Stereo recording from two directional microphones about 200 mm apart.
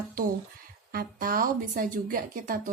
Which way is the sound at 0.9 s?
45° right (ahead or behind).